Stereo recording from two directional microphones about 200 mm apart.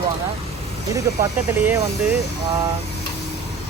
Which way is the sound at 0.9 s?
15° right (ahead or behind).